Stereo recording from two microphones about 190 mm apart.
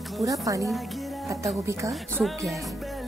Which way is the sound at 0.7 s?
Centre (ahead or behind).